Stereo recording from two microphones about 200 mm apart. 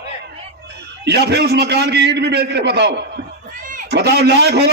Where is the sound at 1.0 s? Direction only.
55° right (ahead or behind).